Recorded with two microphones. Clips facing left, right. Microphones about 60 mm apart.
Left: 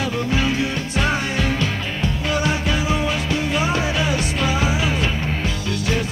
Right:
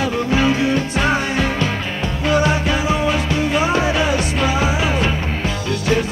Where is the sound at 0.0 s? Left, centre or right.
Right.